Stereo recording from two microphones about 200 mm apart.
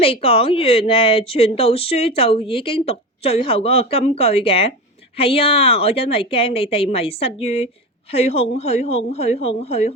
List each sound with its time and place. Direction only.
0.0 s a woman's voice: 30° left (ahead or behind)